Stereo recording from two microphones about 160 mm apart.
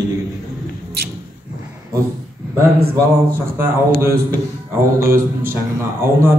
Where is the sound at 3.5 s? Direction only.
15° right (ahead or behind).